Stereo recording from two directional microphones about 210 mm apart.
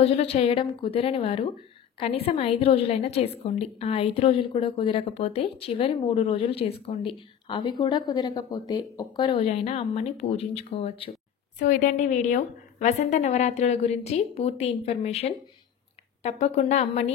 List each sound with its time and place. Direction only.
0.0 s a woman's voice: 30° left (ahead or behind)
11.6 s a woman's voice: 40° left (ahead or behind)